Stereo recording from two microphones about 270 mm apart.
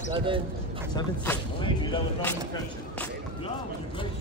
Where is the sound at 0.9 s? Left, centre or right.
Centre.